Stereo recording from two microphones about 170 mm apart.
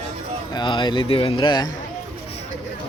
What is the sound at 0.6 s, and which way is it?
Speech, 25° left (ahead or behind).